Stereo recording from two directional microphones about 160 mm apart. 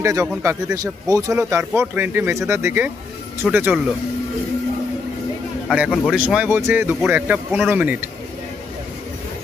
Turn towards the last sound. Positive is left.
turn(degrees=-10)  # may be behind; listen again after turning